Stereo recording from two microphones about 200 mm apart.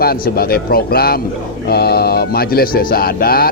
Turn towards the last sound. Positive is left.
turn(degrees=50)  # may be behind; listen again after turning